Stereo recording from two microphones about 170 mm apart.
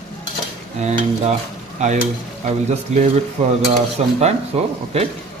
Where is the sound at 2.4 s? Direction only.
45° right (ahead or behind).